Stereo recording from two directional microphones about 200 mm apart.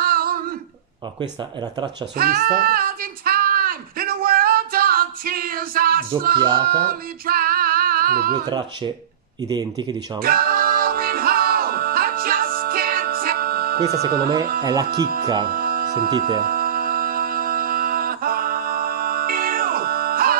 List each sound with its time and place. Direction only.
0.0 s a sound: 45° right (ahead or behind)
2.1 s child singing: 50° right (ahead or behind)
6.8 s music: 45° right (ahead or behind)
8.5 s speech: 20° right (ahead or behind)
10.2 s music: 50° right (ahead or behind)
14.6 s speech: 20° right (ahead or behind)
14.9 s speech: 50° right (ahead or behind)
15.4 s music: 45° right (ahead or behind)